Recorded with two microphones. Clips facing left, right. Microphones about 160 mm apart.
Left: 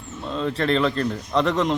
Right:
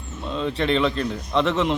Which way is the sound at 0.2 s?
Centre (ahead or behind).